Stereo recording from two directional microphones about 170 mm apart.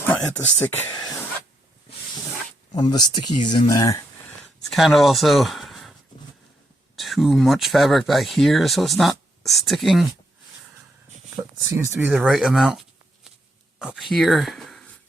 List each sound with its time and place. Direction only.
0.0 s speech: 10° left (ahead or behind)
2.7 s speech: 25° left (ahead or behind)
4.7 s speech: centre (ahead or behind)
6.9 s speech: centre (ahead or behind)
11.3 s speech: 15° right (ahead or behind)
12.1 s speech: centre (ahead or behind)